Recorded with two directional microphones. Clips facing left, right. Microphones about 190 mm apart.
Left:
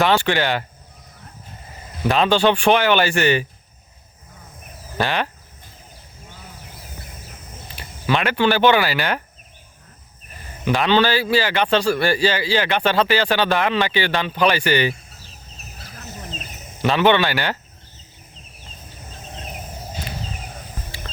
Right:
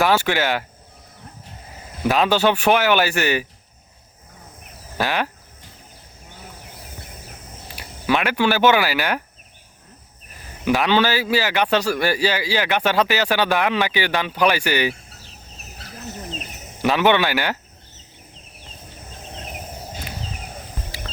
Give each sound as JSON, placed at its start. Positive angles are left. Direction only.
{"t": 0.0, "sound": "a man's voice", "side_deg": -5}
{"t": 2.0, "sound": "a man's voice", "side_deg": -5}
{"t": 4.9, "sound": "a man's voice", "side_deg": -5}
{"t": 7.8, "sound": "speech", "side_deg": -10}
{"t": 10.7, "sound": "a man's voice", "side_deg": -10}
{"t": 16.8, "sound": "a man's voice", "side_deg": -10}